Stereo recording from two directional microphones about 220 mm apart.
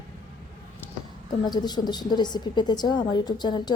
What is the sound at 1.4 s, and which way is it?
A woman's voice, 20° left (ahead or behind).